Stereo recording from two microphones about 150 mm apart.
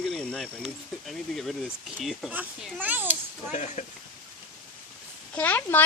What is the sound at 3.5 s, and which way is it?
Speech, 50° left (ahead or behind).